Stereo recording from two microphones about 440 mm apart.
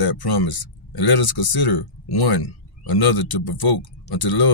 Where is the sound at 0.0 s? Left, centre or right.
Left.